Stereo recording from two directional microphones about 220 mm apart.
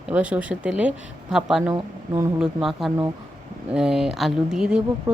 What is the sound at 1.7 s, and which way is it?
Speech, 15° right (ahead or behind).